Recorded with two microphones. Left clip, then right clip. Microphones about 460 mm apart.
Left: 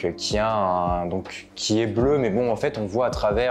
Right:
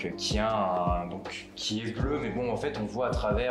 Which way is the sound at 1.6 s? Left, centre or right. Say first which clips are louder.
Left 12 dB; left.